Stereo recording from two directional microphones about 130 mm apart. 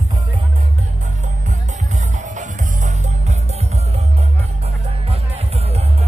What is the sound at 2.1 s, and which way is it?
Music, 70° right (ahead or behind).